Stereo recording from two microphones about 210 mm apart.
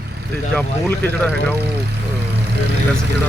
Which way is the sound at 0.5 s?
5° left (ahead or behind).